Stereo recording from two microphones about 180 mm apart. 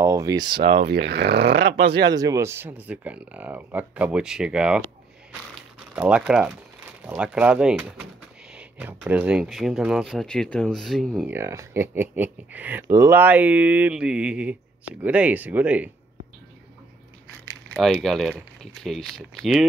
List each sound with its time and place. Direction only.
0.0 s a sound: 20° right (ahead or behind)
0.6 s speech: 70° right (ahead or behind)
2.0 s speech: 20° right (ahead or behind); by 4.8 s 5° right (ahead or behind)
5.5 s crumpling: 5° right (ahead or behind)
7.1 s speech: 5° right (ahead or behind)
11.2 s speech: 15° right (ahead or behind)
17.7 s speech: centre (ahead or behind)